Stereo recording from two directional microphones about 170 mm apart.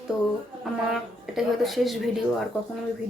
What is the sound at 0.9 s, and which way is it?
Speech, centre (ahead or behind).